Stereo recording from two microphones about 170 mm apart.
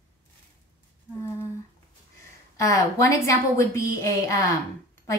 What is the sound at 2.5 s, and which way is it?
A woman's voice, 20° left (ahead or behind).